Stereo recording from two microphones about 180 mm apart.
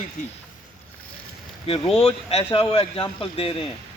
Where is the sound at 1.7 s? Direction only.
35° left (ahead or behind).